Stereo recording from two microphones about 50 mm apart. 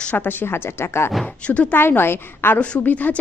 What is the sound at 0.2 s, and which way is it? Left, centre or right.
Speech, left.